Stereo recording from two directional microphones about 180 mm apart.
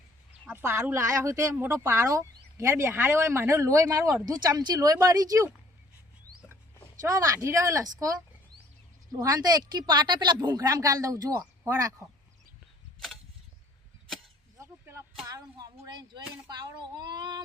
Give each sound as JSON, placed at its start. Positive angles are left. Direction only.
{"t": 0.4, "sound": "speech", "side_deg": -10}
{"t": 7.1, "sound": "speech", "side_deg": -20}
{"t": 9.1, "sound": "speech", "side_deg": -20}
{"t": 14.6, "sound": "a sound", "side_deg": -15}
{"t": 15.3, "sound": "speech", "side_deg": -20}